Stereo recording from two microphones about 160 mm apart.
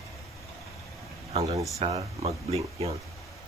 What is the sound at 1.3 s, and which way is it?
Speech, 40° right (ahead or behind).